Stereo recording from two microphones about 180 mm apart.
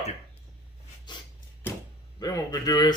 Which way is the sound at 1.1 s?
25° left (ahead or behind).